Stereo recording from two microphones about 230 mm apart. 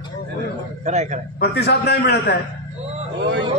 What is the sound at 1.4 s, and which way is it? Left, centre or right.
Speech, left.